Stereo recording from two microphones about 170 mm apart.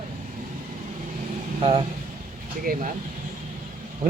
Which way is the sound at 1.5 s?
30° right (ahead or behind).